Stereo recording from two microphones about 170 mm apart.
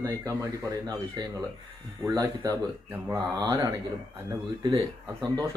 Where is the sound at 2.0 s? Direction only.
20° right (ahead or behind).